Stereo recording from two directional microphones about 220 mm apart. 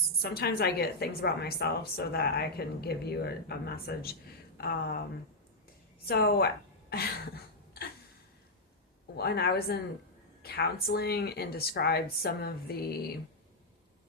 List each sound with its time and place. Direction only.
0.2 s a woman's voice: 45° left (ahead or behind)
6.1 s a woman's voice: 45° left (ahead or behind)
9.1 s a woman's voice: 45° left (ahead or behind)